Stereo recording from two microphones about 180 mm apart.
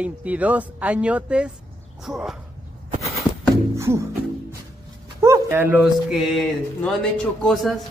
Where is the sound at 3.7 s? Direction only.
15° right (ahead or behind).